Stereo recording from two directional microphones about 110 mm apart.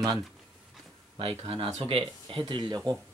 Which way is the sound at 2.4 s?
40° right (ahead or behind).